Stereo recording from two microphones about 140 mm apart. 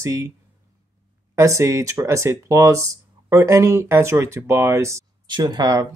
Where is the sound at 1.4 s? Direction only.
20° right (ahead or behind).